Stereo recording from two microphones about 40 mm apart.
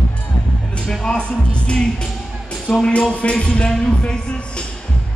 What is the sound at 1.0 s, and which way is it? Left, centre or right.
Music, left.